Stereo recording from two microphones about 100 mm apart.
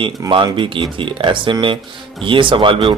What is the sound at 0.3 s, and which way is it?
A man's voice, 55° right (ahead or behind).